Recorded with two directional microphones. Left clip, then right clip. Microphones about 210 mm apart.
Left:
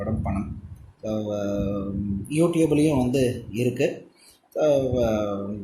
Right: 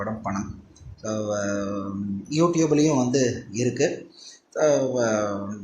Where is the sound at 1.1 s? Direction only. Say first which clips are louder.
Right 1 dB; 35° left (ahead or behind).